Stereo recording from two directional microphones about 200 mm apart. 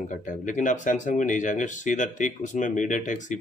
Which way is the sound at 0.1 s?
40° left (ahead or behind).